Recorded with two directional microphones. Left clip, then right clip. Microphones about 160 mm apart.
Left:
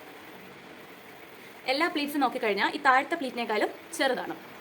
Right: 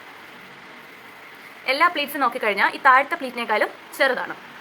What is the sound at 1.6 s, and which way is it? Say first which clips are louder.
A woman's voice: right 8 dB; 30° left (ahead or behind).